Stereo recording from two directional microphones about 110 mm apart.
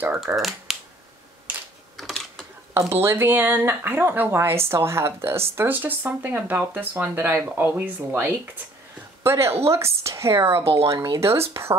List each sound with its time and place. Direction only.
0.4 s speech: centre (ahead or behind)
2.0 s a sound: centre (ahead or behind)
2.7 s speech: 20° right (ahead or behind)
10.6 s speech: 60° right (ahead or behind)
11.1 s speech: 25° right (ahead or behind)